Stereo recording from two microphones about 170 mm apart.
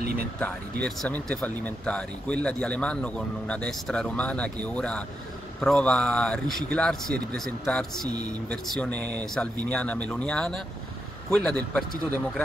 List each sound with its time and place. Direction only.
0.8 s speech: 5° left (ahead or behind)